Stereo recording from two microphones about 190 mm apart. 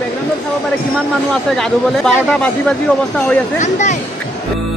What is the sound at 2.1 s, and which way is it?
Speech, 5° left (ahead or behind).